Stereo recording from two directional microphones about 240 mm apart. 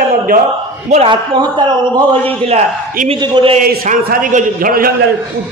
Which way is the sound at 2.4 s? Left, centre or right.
Right.